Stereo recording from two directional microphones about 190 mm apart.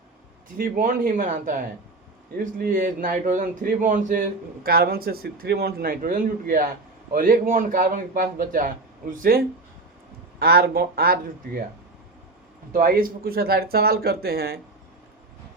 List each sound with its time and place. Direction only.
0.5 s a man's voice: 45° right (ahead or behind)
12.7 s a man's voice: 50° right (ahead or behind)